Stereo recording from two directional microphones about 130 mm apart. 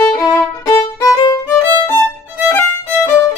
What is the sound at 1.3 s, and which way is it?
Music, 25° left (ahead or behind).